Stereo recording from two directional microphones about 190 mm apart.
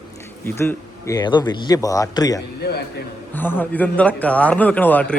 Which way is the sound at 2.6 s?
60° left (ahead or behind).